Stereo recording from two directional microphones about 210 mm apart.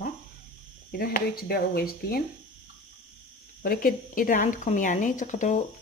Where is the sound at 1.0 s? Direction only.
45° left (ahead or behind).